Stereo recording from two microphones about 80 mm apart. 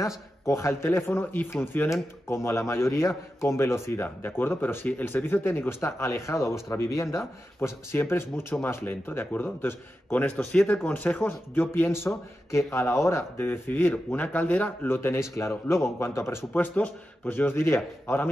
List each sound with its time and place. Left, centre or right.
0.0 s speech: left